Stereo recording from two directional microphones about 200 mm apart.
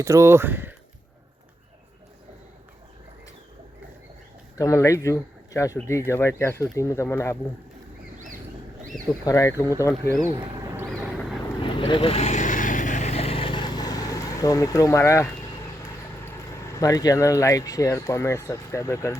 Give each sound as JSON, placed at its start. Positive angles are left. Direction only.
{"t": 0.0, "sound": "speech", "side_deg": -15}
{"t": 4.5, "sound": "speech", "side_deg": 15}
{"t": 9.2, "sound": "speech", "side_deg": 15}
{"t": 11.6, "sound": "vehicle", "side_deg": 25}
{"t": 16.7, "sound": "speech", "side_deg": 15}